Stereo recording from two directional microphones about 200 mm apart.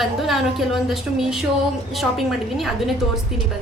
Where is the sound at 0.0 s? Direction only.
Centre (ahead or behind).